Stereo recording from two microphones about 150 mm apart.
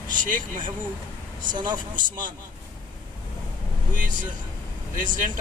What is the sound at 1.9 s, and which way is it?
Speech, 60° right (ahead or behind).